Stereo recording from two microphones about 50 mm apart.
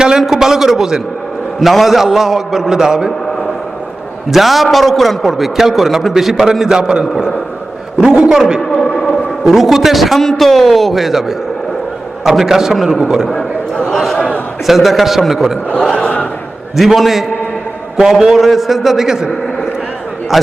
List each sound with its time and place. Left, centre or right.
0.2 s a man's voice: centre
4.3 s a man's voice: centre
9.0 s a man's voice: centre
13.8 s a sound: centre
14.7 s a man's voice: centre
15.9 s a sound: centre
16.7 s a man's voice: centre
20.3 s a man's voice: centre